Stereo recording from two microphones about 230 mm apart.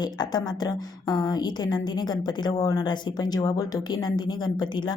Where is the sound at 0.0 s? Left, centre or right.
Centre.